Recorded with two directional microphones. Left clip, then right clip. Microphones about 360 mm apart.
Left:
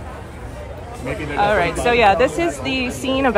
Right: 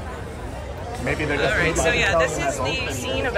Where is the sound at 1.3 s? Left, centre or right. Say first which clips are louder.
Left 6 dB; centre.